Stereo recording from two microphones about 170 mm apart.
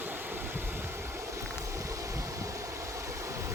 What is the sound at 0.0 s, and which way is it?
Boat, 10° right (ahead or behind).